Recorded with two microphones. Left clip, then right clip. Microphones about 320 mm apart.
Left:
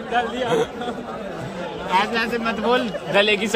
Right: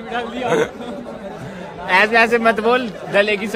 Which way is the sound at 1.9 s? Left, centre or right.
Centre.